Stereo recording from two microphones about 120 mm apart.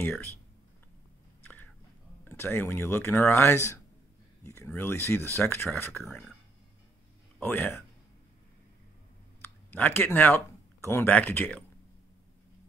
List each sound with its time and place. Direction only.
1.4 s a sound: 15° left (ahead or behind)
2.2 s speech: 20° left (ahead or behind)
7.4 s speech: 20° left (ahead or behind)
9.4 s speech: 15° left (ahead or behind)